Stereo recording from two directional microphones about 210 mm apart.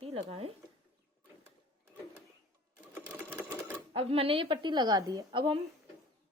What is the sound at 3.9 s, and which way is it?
Speech, 25° right (ahead or behind).